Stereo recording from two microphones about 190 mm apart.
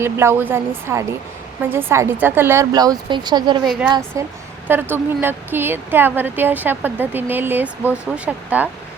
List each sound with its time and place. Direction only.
0.0 s speech: 15° right (ahead or behind)